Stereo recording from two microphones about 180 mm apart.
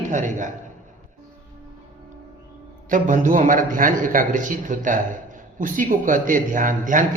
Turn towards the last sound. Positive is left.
turn(degrees=-45)  # may be behind; listen again after turning